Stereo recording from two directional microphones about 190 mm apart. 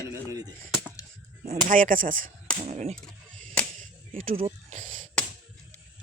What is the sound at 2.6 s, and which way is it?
Speech, 35° right (ahead or behind).